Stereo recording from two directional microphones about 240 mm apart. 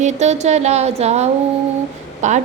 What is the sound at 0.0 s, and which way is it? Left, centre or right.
Music, right.